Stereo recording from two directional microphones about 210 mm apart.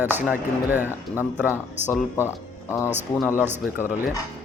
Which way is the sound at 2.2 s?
10° left (ahead or behind).